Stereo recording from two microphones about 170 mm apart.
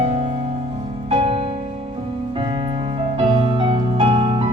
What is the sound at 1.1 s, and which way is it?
Music, 35° right (ahead or behind).